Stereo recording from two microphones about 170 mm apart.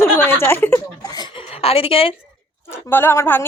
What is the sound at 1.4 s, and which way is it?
Speech, 35° left (ahead or behind).